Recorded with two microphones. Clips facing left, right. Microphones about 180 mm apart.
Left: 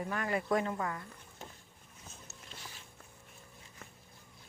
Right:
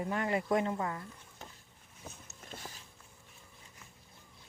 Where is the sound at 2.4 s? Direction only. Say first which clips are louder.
Right 6 dB; 50° right (ahead or behind).